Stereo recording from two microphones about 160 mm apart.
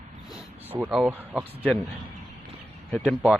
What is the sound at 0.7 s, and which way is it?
Speech, 5° right (ahead or behind).